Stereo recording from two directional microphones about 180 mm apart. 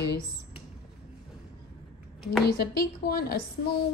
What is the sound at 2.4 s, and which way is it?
Speech, 60° left (ahead or behind).